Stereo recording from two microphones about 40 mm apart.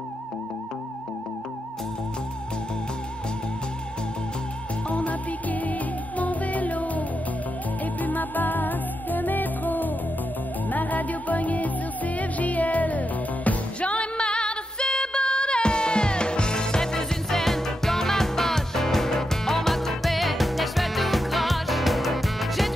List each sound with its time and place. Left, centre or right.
4.8 s music: left
13.7 s music: left; by 22.7 s centre